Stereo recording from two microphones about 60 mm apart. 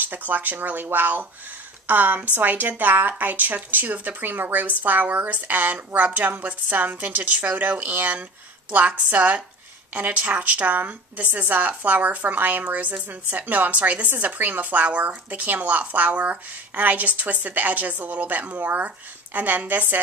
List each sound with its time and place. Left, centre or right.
0.0 s speech: right